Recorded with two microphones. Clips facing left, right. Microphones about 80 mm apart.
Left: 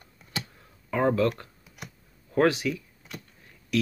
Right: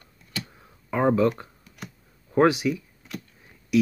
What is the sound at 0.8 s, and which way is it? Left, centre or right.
Speech, centre.